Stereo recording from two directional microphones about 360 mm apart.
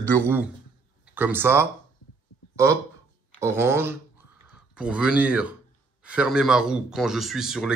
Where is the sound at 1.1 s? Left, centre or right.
Centre.